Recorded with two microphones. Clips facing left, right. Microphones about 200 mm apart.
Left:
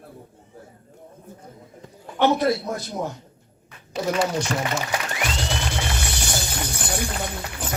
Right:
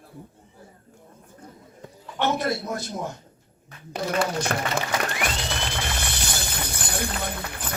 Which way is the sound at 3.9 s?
55° right (ahead or behind).